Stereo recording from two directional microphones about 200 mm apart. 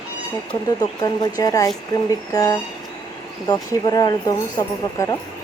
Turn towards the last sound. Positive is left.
turn(degrees=15)  # may be behind; listen again after turning